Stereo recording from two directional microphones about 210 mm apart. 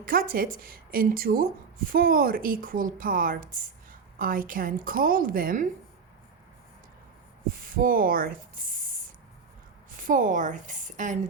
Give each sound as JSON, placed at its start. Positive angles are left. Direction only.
{"t": 0.0, "sound": "speech", "side_deg": -45}
{"t": 7.8, "sound": "speech", "side_deg": -45}
{"t": 10.0, "sound": "a woman's voice", "side_deg": -40}